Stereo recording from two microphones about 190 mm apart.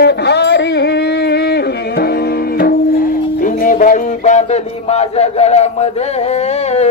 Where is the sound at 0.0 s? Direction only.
65° left (ahead or behind).